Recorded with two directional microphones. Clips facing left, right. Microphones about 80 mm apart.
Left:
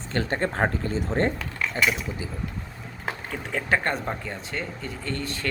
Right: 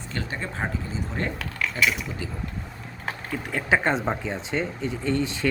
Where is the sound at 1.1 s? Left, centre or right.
Left.